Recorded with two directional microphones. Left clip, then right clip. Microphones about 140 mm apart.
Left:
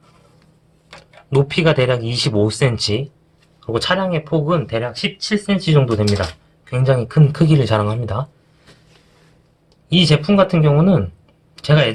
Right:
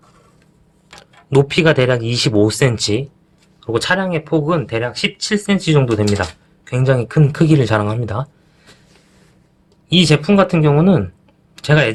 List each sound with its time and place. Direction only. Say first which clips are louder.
0.9 s speech: right 4 dB; 40° right (ahead or behind)
9.9 s speech: right 2 dB; 40° right (ahead or behind)